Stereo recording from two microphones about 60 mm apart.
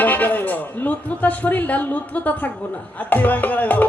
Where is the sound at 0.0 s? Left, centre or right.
Left.